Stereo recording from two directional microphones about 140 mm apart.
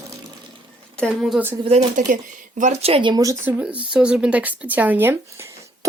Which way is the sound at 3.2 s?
15° right (ahead or behind).